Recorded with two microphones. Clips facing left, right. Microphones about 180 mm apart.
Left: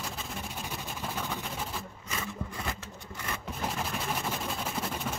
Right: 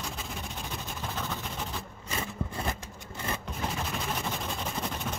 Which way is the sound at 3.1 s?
30° right (ahead or behind).